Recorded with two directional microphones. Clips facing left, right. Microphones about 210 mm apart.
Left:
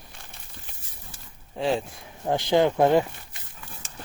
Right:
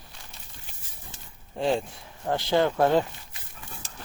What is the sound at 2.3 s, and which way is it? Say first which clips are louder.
Speech: left 3 dB; 15° left (ahead or behind).